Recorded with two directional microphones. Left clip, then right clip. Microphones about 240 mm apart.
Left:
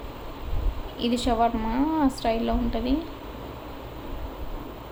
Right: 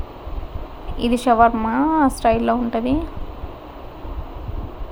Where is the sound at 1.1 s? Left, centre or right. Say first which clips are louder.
Right 9 dB; right.